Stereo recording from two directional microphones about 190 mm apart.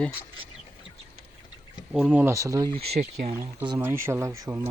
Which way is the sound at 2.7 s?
35° right (ahead or behind).